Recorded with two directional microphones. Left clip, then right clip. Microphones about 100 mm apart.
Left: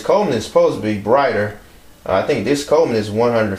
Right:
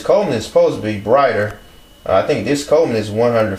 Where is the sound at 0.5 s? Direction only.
20° left (ahead or behind).